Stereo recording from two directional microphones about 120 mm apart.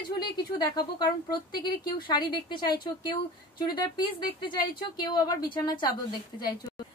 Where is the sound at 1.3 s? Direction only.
35° left (ahead or behind).